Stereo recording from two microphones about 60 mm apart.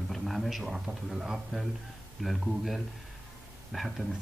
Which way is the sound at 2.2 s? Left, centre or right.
Centre.